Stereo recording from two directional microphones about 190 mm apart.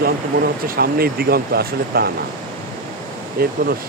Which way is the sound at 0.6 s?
50° right (ahead or behind).